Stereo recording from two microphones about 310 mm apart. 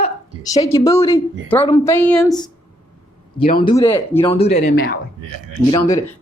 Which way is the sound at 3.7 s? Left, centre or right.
Centre.